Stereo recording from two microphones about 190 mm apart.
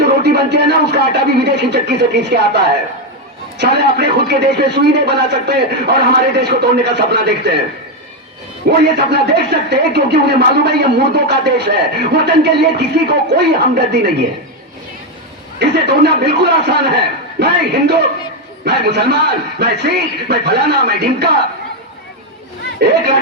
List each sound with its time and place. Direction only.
0.0 s a sound: 60° right (ahead or behind)
3.6 s speech: 60° right (ahead or behind)
8.8 s speech: 60° right (ahead or behind)
15.5 s speech: 60° right (ahead or behind)
22.8 s speech: 60° right (ahead or behind)